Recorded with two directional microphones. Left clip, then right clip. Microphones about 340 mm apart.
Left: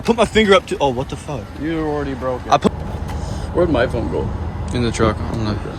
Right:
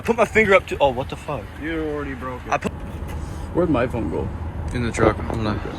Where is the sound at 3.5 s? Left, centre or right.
Centre.